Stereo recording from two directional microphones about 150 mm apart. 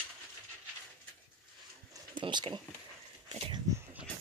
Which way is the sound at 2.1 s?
30° right (ahead or behind).